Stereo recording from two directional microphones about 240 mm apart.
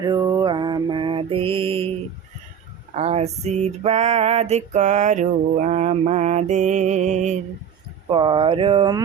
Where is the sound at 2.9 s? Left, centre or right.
Right.